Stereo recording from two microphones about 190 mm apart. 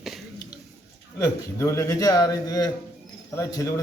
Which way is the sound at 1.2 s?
15° left (ahead or behind).